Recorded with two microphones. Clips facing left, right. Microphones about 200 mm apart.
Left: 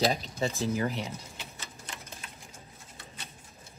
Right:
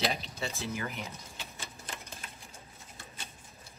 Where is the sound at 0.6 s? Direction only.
30° left (ahead or behind).